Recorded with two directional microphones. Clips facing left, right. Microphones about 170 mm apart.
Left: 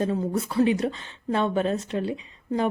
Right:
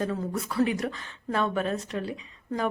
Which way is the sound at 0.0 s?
25° left (ahead or behind).